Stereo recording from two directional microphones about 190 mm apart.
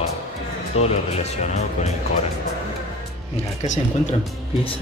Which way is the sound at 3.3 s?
40° left (ahead or behind).